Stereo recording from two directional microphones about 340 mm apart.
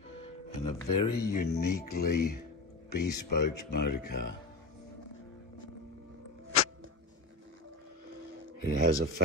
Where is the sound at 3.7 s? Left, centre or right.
Left.